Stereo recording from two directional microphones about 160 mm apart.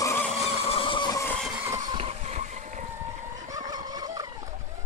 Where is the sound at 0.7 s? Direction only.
30° left (ahead or behind).